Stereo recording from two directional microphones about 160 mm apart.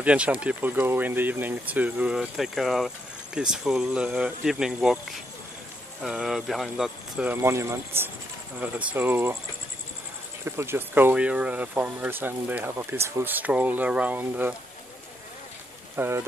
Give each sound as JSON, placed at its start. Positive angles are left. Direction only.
{"t": 0.0, "sound": "speech", "side_deg": -5}
{"t": 6.0, "sound": "speech", "side_deg": -5}
{"t": 10.4, "sound": "speech", "side_deg": -15}
{"t": 16.0, "sound": "speech", "side_deg": -15}